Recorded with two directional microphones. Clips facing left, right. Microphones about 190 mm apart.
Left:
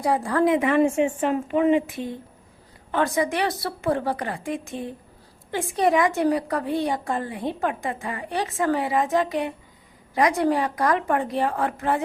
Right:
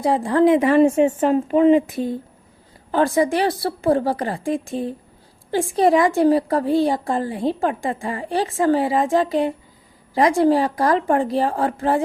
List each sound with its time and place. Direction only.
0.0 s a woman's voice: 25° right (ahead or behind)